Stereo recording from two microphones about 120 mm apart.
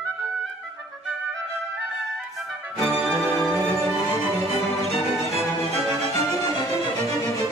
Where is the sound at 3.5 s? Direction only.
25° left (ahead or behind).